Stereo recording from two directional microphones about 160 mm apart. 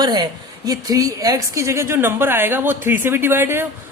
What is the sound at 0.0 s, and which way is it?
A man's voice, 25° right (ahead or behind).